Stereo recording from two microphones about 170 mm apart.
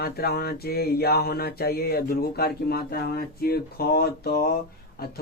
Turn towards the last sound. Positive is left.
turn(degrees=65)  # may be behind; listen again after turning